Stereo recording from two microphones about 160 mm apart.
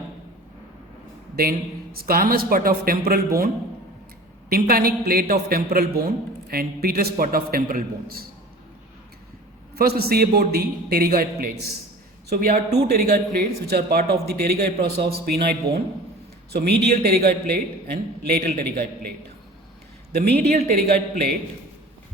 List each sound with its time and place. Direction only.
1.4 s a man's voice: 70° right (ahead or behind)
4.4 s a man's voice: 65° right (ahead or behind)
9.7 s a man's voice: 75° right (ahead or behind)
20.1 s speech: 90° right
20.7 s speech: 65° right (ahead or behind)